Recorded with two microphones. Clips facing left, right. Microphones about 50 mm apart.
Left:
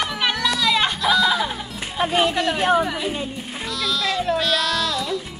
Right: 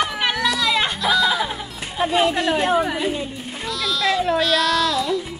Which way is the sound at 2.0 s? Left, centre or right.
Left.